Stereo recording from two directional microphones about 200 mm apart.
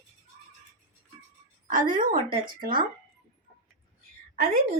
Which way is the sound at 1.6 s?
45° right (ahead or behind).